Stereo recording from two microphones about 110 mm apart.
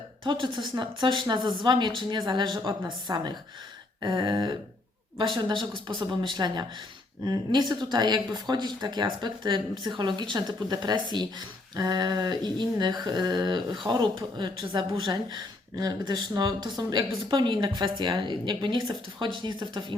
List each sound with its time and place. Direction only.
0.3 s speech: 45° right (ahead or behind)
6.0 s speech: 45° right (ahead or behind)